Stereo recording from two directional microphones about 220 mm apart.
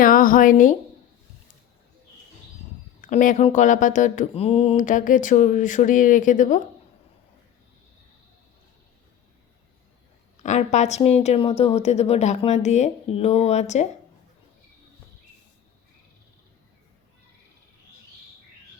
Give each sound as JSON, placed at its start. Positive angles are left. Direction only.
{"t": 0.0, "sound": "a woman's voice", "side_deg": 40}
{"t": 3.0, "sound": "speech", "side_deg": 35}
{"t": 10.4, "sound": "a woman's voice", "side_deg": 30}